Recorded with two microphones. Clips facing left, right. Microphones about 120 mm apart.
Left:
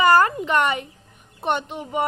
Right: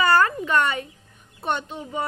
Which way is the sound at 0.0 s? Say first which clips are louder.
Left 3 dB; 20° left (ahead or behind).